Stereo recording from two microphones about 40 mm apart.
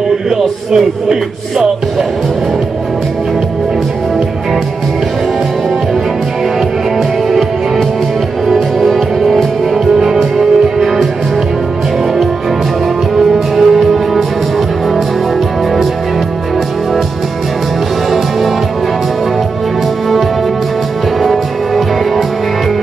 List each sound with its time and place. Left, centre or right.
0.4 s speech: centre
8.5 s music: centre
13.1 s music: centre
21.2 s music: centre